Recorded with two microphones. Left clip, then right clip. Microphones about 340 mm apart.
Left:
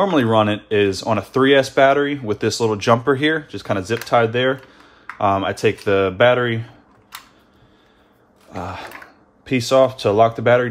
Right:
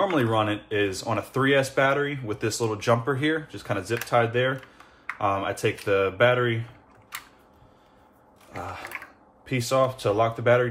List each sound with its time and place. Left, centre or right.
0.0 s speech: left
8.5 s speech: left